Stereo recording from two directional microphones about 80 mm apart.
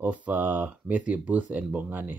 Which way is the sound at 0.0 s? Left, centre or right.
Centre.